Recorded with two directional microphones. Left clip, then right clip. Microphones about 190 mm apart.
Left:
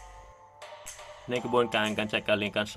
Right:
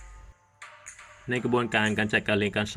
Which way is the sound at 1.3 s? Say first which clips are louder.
Even; 10° left (ahead or behind).